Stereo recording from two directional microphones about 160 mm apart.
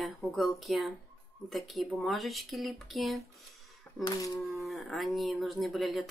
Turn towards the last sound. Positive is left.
turn(degrees=0)  # may be behind; listen again after turning